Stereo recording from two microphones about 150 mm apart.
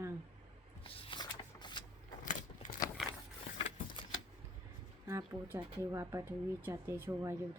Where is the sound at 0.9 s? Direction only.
40° left (ahead or behind).